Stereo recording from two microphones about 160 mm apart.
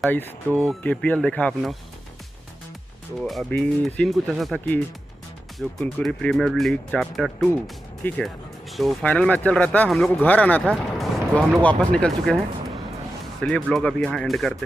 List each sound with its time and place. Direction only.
0.0 s speech: 10° left (ahead or behind)
3.3 s speech: 5° left (ahead or behind)
5.6 s speech: centre (ahead or behind)
13.4 s speech: 5° left (ahead or behind)